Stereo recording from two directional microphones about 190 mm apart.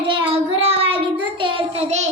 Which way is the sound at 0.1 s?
30° right (ahead or behind).